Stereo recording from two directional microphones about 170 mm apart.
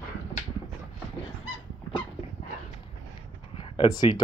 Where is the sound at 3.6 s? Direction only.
30° left (ahead or behind).